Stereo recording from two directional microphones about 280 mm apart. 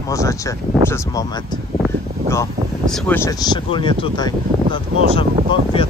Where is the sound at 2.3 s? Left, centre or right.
Centre.